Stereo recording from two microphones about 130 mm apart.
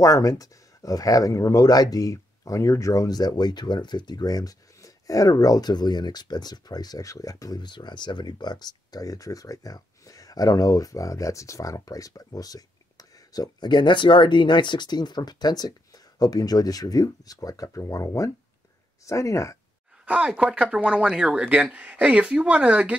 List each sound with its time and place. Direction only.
0.0 s speech: 25° left (ahead or behind)
20.1 s speech: 10° right (ahead or behind)